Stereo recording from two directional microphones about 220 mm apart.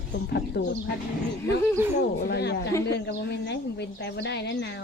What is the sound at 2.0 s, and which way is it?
A woman's voice, 50° left (ahead or behind).